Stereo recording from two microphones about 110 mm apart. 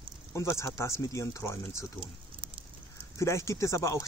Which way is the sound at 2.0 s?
50° right (ahead or behind).